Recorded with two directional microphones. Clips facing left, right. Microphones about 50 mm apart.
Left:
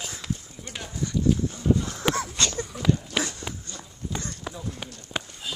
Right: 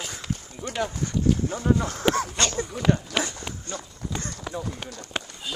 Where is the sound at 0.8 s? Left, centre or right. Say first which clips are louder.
Right 1 dB; right.